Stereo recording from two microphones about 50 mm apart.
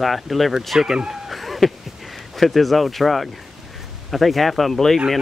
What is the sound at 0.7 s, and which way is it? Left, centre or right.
Speech, centre.